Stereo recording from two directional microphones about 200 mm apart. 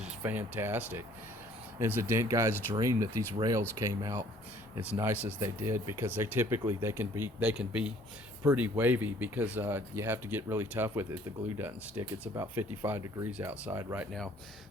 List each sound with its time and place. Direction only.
0.0 s speech: 10° right (ahead or behind)